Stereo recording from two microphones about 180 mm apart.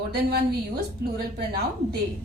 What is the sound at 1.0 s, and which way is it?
A woman's voice, 60° right (ahead or behind).